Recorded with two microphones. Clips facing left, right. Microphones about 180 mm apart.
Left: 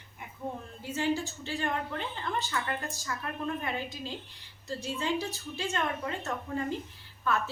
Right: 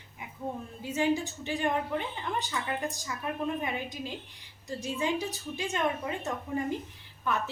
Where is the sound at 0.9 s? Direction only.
15° right (ahead or behind).